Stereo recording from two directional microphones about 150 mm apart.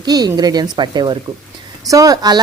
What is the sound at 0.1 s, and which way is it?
Speech, 25° right (ahead or behind).